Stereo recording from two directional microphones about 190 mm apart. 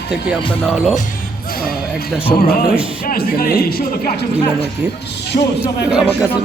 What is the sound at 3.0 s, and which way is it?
Speech, 50° left (ahead or behind).